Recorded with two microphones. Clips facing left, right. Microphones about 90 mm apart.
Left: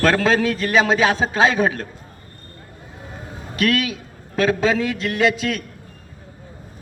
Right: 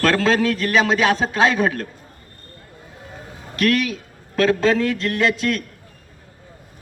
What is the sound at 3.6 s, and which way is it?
A man's voice, 10° left (ahead or behind).